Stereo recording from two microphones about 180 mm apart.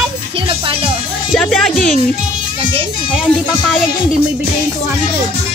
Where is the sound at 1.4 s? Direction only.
Centre (ahead or behind).